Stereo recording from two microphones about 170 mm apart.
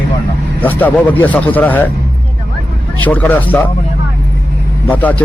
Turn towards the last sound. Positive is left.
turn(degrees=10)  # may be behind; listen again after turning